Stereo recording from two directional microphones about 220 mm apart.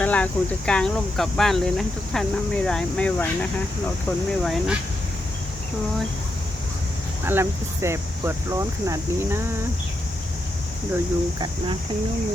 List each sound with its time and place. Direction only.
0.0 s speech: 5° left (ahead or behind)
7.3 s speech: 10° right (ahead or behind)
10.9 s speech: 20° right (ahead or behind)